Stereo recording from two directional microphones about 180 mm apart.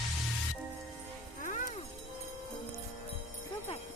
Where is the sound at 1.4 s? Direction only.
45° left (ahead or behind).